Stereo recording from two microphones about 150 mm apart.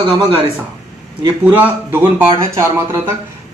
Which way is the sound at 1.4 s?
10° right (ahead or behind).